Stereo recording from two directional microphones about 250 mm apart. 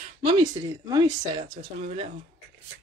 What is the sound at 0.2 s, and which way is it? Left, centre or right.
Speech, centre.